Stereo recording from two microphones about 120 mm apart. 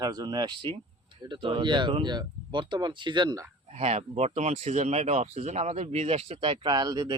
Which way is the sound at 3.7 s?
60° right (ahead or behind).